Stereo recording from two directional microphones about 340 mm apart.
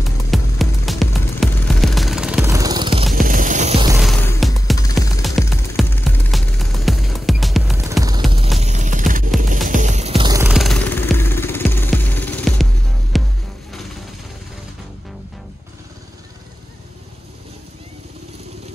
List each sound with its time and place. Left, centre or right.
0.3 s music: centre
4.0 s music: centre
8.5 s music: centre